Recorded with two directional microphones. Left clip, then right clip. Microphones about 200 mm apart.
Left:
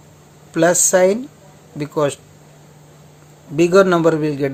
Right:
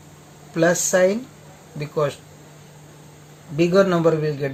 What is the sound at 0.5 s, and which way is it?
Speech, 35° left (ahead or behind).